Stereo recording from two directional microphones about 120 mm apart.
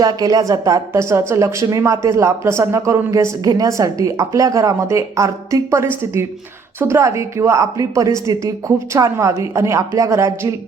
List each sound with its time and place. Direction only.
0.0 s speech: 30° right (ahead or behind)